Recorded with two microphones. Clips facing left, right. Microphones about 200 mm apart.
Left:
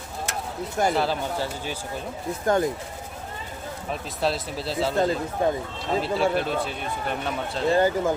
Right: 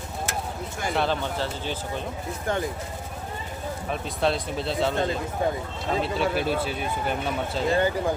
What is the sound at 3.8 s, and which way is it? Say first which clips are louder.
A man's voice: right 1 dB; centre (ahead or behind).